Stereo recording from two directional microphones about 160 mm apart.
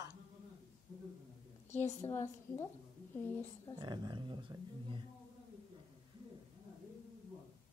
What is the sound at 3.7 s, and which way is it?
Speech, 25° right (ahead or behind).